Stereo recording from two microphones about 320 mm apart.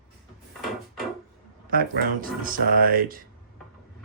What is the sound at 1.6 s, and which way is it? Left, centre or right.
Speech, right.